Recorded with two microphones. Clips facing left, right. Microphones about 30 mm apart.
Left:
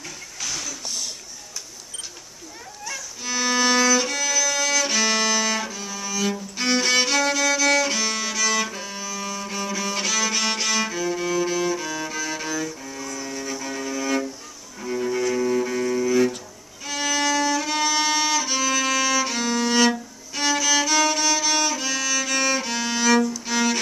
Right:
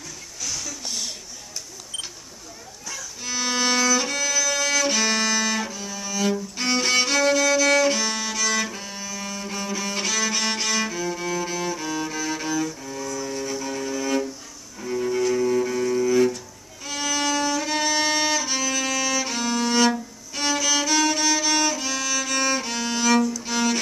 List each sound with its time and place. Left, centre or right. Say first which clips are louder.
0.5 s a sound: left 1 dB; left
3.3 s violin: left 3 dB; centre
6.1 s music: right 2 dB; centre
14.8 s cello: right 1 dB; centre
16.8 s violin: left 2 dB; centre
20.3 s music: left 2 dB; centre